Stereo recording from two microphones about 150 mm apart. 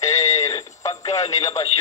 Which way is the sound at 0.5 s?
30° left (ahead or behind).